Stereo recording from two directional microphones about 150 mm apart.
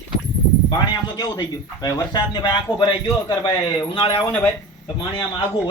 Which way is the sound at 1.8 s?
25° left (ahead or behind).